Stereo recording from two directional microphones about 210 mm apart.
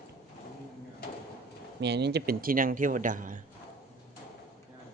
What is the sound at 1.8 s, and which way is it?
A man's voice, 55° right (ahead or behind).